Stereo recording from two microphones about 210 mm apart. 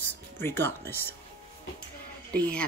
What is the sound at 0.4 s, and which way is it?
Speech, 10° left (ahead or behind).